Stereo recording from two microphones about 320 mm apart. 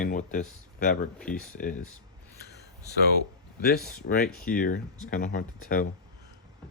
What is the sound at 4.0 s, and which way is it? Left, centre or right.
Speech, left.